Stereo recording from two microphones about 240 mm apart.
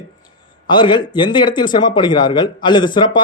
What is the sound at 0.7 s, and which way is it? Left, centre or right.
A man's voice, centre.